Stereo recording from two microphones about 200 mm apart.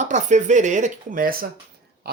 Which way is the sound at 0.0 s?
35° right (ahead or behind).